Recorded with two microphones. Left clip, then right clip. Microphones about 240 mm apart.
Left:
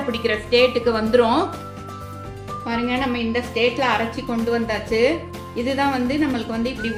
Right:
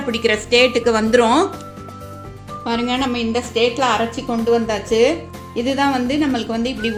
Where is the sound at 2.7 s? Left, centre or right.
Right.